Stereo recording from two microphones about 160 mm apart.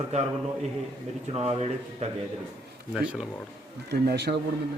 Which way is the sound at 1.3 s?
40° right (ahead or behind).